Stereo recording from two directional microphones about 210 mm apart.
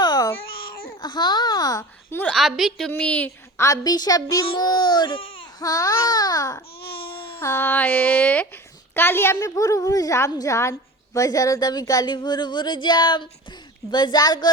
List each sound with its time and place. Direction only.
0.0 s babbling: 20° left (ahead or behind)
0.9 s a child's voice: 20° left (ahead or behind)
6.8 s baby cry: 50° left (ahead or behind)
7.3 s a child's voice: 10° left (ahead or behind)